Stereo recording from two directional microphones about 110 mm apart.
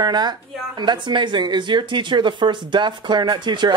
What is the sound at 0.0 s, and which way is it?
Speech, 40° right (ahead or behind).